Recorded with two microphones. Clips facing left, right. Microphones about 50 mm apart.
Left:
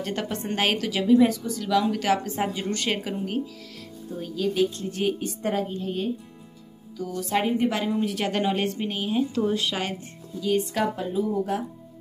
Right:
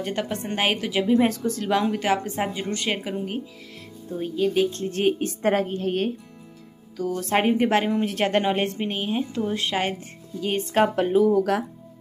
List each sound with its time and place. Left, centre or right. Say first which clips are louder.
0.0 s speech: right 2 dB; right
1.2 s a woman's voice: left 1 dB; right
1.6 s a woman's voice: even; right; by 3.4 s centre
4.2 s a woman's voice: right 2 dB; right
4.7 s a woman's voice: right 4 dB; right
11.0 s speech: right 7 dB; right